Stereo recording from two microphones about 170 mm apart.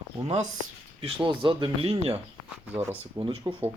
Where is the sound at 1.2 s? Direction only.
30° right (ahead or behind).